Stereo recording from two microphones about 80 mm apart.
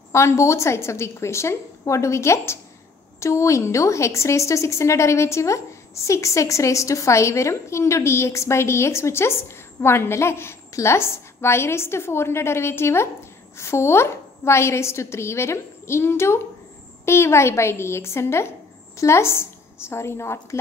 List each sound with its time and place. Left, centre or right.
0.1 s a woman's voice: left